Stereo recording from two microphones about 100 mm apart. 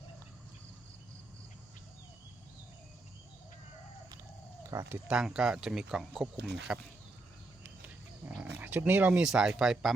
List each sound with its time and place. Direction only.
4.7 s speech: 30° right (ahead or behind)
5.0 s speech: 10° right (ahead or behind)
7.6 s roaring cats: 20° right (ahead or behind)
8.9 s speech: 15° right (ahead or behind)